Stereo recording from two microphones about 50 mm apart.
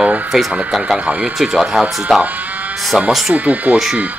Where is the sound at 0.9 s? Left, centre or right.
Right.